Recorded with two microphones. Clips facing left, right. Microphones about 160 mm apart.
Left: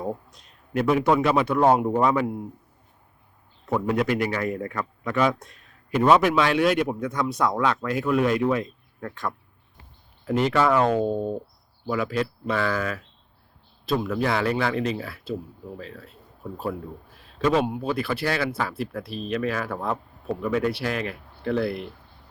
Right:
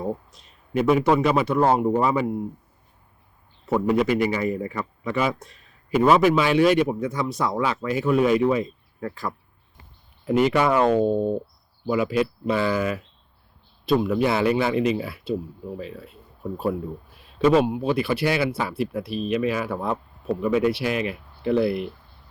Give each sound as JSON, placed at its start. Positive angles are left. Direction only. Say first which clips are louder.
{"t": 0.0, "sound": "a man's voice", "louder": "right 2 dB", "side_deg": 0}
{"t": 3.7, "sound": "a man's voice", "louder": "right 3 dB", "side_deg": -5}
{"t": 10.8, "sound": "a man's voice", "louder": "right 3 dB", "side_deg": -5}
{"t": 14.0, "sound": "speech", "louder": "right 1 dB", "side_deg": -5}
{"t": 17.4, "sound": "speech", "louder": "right 4 dB", "side_deg": -5}